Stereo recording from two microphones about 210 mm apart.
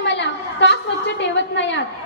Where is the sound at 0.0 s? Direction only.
60° left (ahead or behind).